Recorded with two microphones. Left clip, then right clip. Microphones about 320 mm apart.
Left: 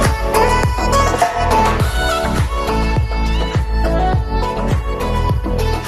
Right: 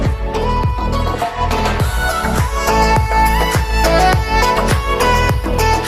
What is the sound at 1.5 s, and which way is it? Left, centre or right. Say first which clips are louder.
Music: left 4 dB; centre.